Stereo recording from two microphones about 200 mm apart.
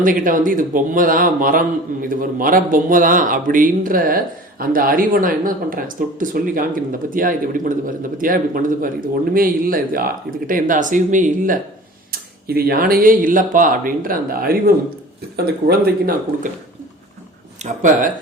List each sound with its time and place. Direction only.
0.0 s speech: 40° right (ahead or behind)
15.6 s speech: 50° right (ahead or behind)
17.6 s speech: 35° right (ahead or behind)